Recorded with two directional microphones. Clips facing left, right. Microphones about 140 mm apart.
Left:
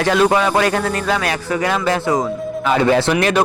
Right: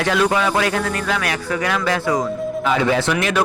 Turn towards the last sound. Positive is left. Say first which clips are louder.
# left 4 dB
turn(degrees=30)  # may be behind; listen again after turning